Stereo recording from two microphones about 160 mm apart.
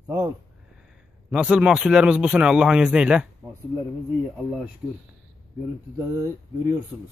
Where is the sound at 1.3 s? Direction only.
5° right (ahead or behind).